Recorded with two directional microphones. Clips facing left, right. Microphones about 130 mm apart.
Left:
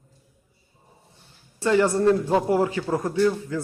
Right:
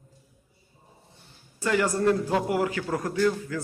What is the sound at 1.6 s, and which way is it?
A man's voice, 25° left (ahead or behind).